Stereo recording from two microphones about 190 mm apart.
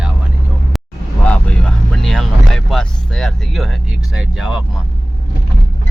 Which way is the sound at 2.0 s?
5° left (ahead or behind).